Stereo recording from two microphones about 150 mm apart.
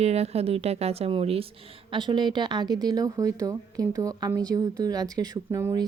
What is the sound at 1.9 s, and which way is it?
Speech, 30° right (ahead or behind).